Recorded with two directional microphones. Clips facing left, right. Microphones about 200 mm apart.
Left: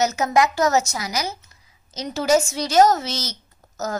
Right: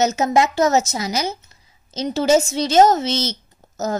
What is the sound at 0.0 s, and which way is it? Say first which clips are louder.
A woman's voice: right 2 dB; 25° right (ahead or behind).